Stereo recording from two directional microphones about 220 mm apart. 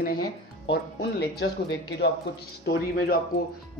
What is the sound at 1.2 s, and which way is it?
Speech, 50° left (ahead or behind).